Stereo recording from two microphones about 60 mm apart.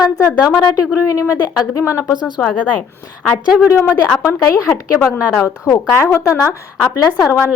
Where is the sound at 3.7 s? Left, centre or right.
Left.